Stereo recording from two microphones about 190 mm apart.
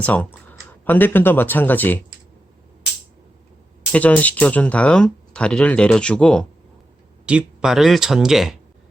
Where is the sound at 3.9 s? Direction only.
5° left (ahead or behind).